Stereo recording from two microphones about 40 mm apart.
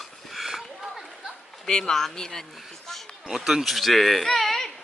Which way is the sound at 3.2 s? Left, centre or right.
Centre.